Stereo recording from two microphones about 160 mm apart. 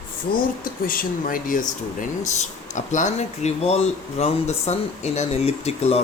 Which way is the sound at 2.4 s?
50° left (ahead or behind).